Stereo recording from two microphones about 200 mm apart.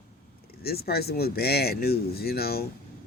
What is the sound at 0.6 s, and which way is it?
Speech, 50° left (ahead or behind).